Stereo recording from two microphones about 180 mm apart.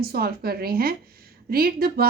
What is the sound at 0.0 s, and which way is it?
A woman's voice, 60° right (ahead or behind).